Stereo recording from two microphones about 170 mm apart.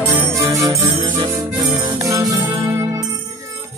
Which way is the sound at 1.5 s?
25° right (ahead or behind).